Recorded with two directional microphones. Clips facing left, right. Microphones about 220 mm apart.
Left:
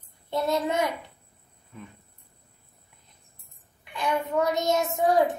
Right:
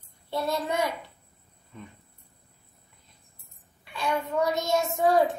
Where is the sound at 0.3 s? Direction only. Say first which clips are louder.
Left 3 dB; 20° left (ahead or behind).